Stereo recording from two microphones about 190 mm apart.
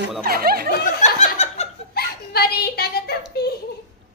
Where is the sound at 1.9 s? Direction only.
55° left (ahead or behind).